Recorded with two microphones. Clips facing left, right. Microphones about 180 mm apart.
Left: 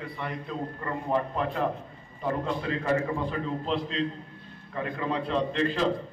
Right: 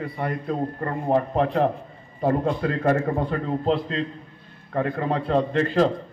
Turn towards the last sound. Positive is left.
turn(degrees=-45)  # may be behind; listen again after turning